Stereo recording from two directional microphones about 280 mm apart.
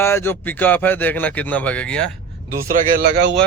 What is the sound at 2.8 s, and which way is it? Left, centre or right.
Speech, right.